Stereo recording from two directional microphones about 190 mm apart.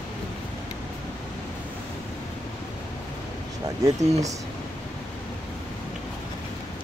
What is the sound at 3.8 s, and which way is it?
Speech, 15° right (ahead or behind).